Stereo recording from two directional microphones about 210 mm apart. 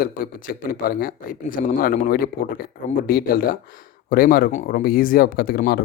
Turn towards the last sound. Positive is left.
turn(degrees=45)  # may be behind; listen again after turning